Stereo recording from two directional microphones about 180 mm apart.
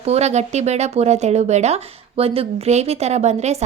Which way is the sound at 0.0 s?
35° right (ahead or behind).